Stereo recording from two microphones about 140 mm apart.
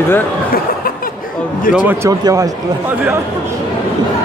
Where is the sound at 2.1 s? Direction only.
25° right (ahead or behind).